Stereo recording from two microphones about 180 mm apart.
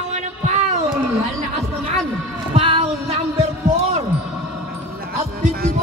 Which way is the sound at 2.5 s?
30° right (ahead or behind).